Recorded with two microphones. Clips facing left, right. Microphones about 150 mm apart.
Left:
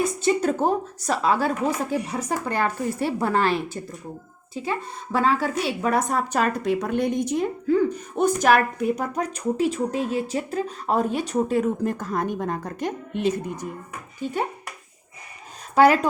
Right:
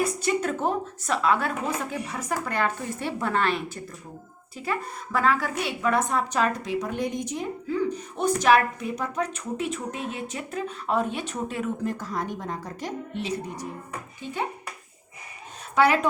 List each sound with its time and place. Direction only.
0.0 s a woman's voice: 30° left (ahead or behind); by 13.7 s 55° left (ahead or behind)
15.7 s speech: 40° left (ahead or behind)